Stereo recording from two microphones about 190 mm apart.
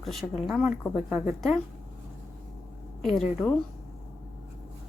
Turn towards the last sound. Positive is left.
turn(degrees=5)  # may be behind; listen again after turning